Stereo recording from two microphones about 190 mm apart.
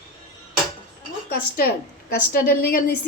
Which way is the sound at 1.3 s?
50° left (ahead or behind).